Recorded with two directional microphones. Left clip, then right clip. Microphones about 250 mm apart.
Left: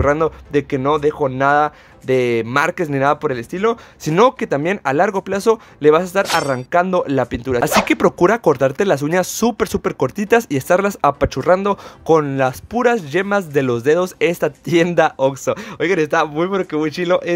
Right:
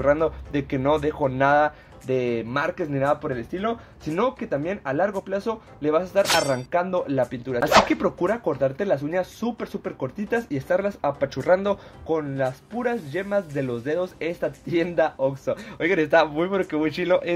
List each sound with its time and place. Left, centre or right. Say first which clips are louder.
0.0 s speech: left 5 dB; left
6.2 s speech: left 3 dB; centre
6.7 s speech: left 8 dB; left
12.1 s speech: left 10 dB; left
15.8 s speech: left 3 dB; left